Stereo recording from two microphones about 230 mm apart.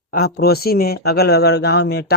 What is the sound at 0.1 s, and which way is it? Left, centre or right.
A man's voice, left.